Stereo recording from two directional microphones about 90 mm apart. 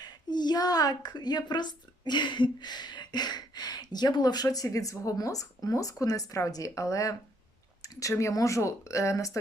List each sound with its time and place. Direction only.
0.0 s a woman's voice: 50° left (ahead or behind)
7.8 s a sound: 40° left (ahead or behind)
8.1 s speech: 35° left (ahead or behind)